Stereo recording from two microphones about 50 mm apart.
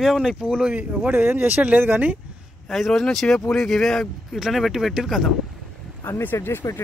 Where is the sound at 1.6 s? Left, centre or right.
Right.